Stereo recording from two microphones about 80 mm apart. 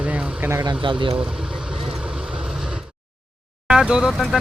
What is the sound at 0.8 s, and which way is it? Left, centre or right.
Speech, right.